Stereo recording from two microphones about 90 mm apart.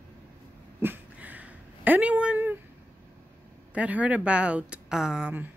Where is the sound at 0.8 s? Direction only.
20° right (ahead or behind).